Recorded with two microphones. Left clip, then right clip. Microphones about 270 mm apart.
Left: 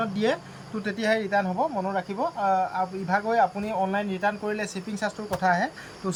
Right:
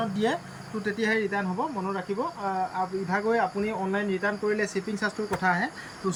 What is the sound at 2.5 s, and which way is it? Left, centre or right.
Speech, centre.